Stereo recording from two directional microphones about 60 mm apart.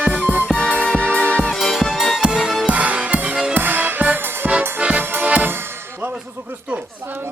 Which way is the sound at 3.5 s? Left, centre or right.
Right.